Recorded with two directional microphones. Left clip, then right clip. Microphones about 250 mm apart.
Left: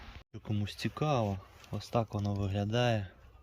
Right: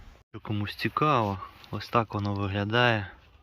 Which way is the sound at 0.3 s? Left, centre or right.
Centre.